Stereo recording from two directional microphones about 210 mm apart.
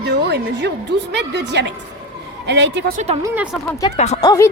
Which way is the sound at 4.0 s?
30° left (ahead or behind).